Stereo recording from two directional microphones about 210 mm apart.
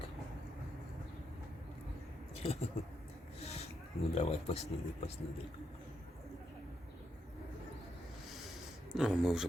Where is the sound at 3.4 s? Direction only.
30° left (ahead or behind).